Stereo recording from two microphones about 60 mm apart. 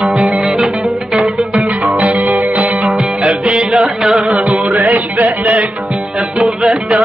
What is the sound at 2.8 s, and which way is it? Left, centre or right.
Music, centre.